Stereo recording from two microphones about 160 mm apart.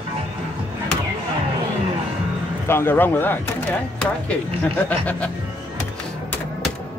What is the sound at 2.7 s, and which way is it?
Speech, 15° left (ahead or behind).